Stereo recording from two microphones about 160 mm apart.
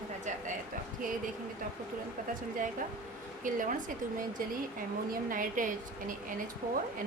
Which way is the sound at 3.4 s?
55° right (ahead or behind).